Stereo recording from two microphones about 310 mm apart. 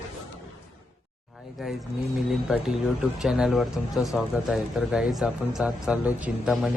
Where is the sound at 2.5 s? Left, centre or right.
Centre.